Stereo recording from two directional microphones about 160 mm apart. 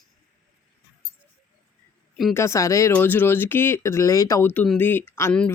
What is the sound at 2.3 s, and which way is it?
Speech, 15° left (ahead or behind).